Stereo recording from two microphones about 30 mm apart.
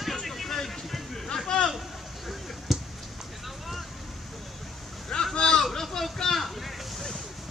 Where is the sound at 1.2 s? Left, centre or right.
Left.